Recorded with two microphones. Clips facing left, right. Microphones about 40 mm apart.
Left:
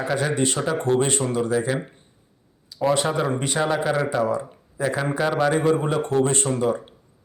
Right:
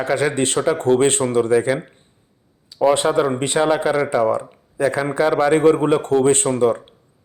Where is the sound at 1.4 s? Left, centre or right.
Right.